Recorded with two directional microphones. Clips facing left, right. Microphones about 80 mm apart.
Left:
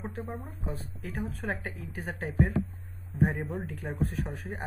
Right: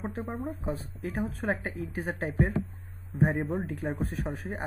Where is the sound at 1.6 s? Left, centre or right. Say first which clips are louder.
Right 5 dB; centre.